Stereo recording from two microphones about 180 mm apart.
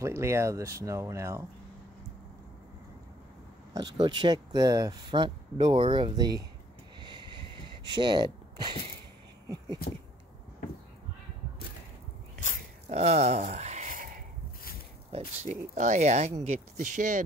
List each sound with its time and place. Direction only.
0.0 s speech: 15° right (ahead or behind)
3.7 s speech: 25° right (ahead or behind)
7.0 s a sound: 25° right (ahead or behind)
7.8 s speech: 25° right (ahead or behind)
12.9 s a sound: 35° right (ahead or behind)
15.1 s speech: 40° right (ahead or behind)